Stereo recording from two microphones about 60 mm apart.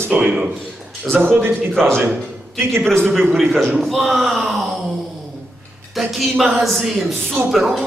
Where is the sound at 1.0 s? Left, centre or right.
Right.